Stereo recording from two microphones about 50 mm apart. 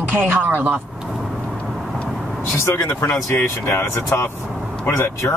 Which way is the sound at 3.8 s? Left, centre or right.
Left.